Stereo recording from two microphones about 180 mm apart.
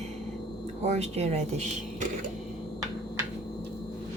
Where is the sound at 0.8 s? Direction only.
40° right (ahead or behind).